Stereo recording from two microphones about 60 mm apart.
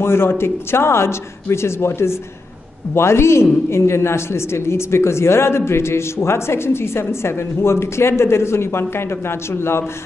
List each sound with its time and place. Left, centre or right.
0.0 s a man's voice: left